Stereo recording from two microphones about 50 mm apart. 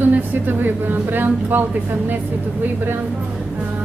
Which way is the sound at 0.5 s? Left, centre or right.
Right.